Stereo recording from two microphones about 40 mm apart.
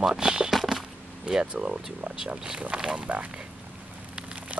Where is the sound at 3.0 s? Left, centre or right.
Right.